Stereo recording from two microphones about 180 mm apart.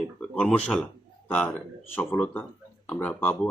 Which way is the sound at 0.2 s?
5° left (ahead or behind).